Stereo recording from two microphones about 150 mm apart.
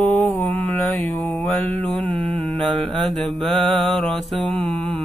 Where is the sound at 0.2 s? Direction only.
15° left (ahead or behind).